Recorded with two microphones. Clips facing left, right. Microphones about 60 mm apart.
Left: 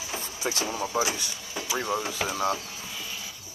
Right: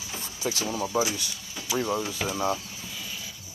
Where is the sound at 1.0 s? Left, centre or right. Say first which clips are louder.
Even; left.